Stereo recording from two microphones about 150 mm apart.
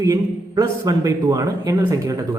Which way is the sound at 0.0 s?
20° right (ahead or behind).